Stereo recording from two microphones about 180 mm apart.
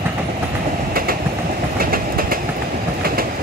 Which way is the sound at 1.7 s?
55° right (ahead or behind).